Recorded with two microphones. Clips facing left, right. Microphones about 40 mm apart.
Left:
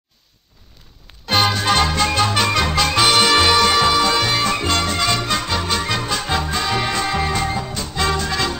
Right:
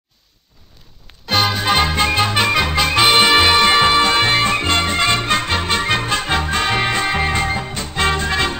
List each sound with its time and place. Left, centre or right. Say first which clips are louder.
1.2 s music: even; centre
3.1 s music: right 3 dB; right